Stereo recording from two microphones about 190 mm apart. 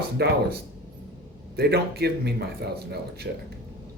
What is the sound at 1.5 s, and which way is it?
Speech, 60° right (ahead or behind).